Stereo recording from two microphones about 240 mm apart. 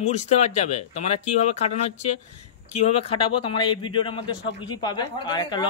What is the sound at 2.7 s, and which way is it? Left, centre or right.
A man's voice, left.